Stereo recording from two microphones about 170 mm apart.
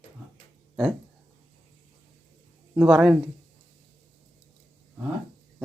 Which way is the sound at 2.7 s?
5° right (ahead or behind).